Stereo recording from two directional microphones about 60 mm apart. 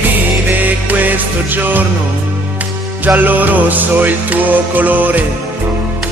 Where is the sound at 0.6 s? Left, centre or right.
Right.